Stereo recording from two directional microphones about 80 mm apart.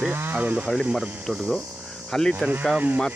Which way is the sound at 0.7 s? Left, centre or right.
Centre.